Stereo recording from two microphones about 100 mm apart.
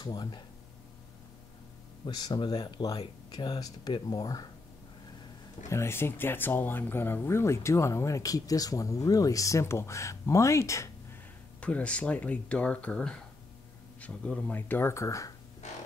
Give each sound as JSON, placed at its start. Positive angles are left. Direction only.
{"t": 0.0, "sound": "speech", "side_deg": 45}
{"t": 2.0, "sound": "speech", "side_deg": 45}
{"t": 5.7, "sound": "speech", "side_deg": 25}
{"t": 11.6, "sound": "speech", "side_deg": 10}